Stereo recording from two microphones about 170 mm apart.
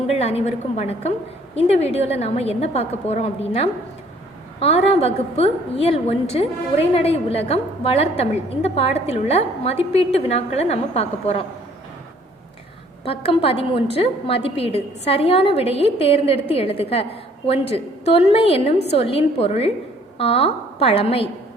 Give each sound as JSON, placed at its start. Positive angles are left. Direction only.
{"t": 0.1, "sound": "a woman's voice", "side_deg": 35}
{"t": 13.1, "sound": "a woman's voice", "side_deg": 35}